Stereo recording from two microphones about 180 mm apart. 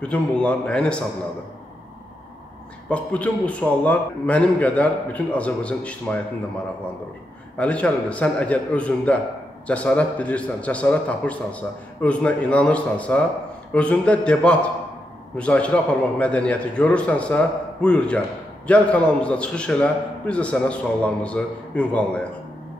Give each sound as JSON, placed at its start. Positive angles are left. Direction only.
{"t": 0.0, "sound": "a man's voice", "side_deg": 5}
{"t": 2.9, "sound": "a man's voice", "side_deg": 5}
{"t": 7.5, "sound": "a man's voice", "side_deg": 5}